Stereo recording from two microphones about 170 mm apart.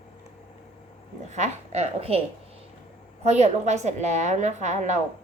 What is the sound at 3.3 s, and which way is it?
A woman's voice, 40° right (ahead or behind).